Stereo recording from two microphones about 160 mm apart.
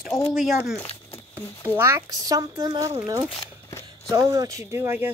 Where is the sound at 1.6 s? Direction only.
15° right (ahead or behind).